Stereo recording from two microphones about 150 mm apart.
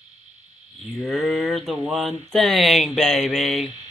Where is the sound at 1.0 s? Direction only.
Centre (ahead or behind).